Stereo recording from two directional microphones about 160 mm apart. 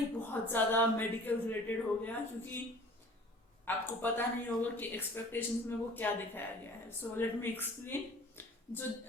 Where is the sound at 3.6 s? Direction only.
10° left (ahead or behind).